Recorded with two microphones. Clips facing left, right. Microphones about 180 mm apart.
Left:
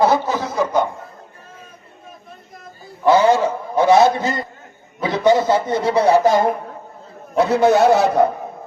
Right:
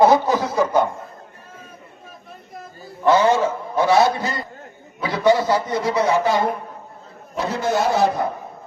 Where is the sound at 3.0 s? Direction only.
10° left (ahead or behind); by 6.5 s 45° left (ahead or behind).